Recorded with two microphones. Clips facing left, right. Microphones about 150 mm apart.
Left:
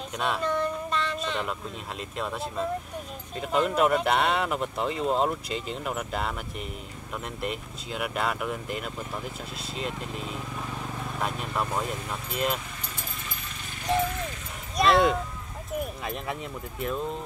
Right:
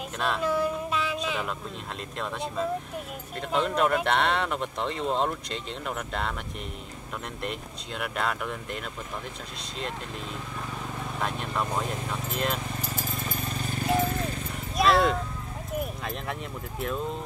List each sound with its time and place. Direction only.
0.2 s a sound: centre (ahead or behind)
2.1 s speech: 5° left (ahead or behind)
7.4 s speech: 5° left (ahead or behind)
11.1 s speech: 5° left (ahead or behind)
13.4 s vehicle: 40° right (ahead or behind)
14.0 s horse: 35° right (ahead or behind)
14.8 s speech: centre (ahead or behind)
15.8 s a sound: centre (ahead or behind)